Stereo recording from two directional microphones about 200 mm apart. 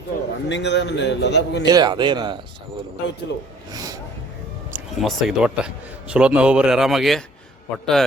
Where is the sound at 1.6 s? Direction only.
20° right (ahead or behind).